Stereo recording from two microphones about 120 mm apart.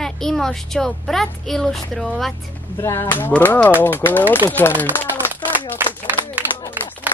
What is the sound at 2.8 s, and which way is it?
Speech, 25° left (ahead or behind).